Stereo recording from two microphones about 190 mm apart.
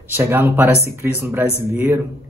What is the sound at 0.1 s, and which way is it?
Speech, 10° right (ahead or behind).